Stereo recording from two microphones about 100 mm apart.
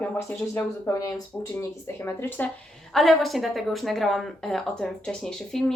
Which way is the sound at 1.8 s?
25° left (ahead or behind).